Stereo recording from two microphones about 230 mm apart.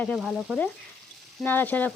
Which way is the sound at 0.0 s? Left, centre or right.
Centre.